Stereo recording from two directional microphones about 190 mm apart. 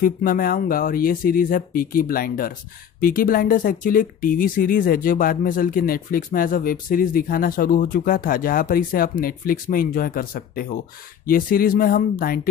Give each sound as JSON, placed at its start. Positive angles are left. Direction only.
{"t": 0.0, "sound": "speech", "side_deg": 50}